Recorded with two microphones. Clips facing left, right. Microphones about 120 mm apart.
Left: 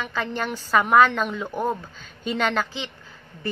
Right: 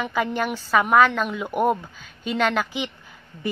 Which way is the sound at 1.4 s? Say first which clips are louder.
Right 9 dB; 15° right (ahead or behind).